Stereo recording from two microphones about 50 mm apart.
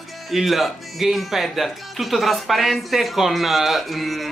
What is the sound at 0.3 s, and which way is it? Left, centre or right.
Speech, centre.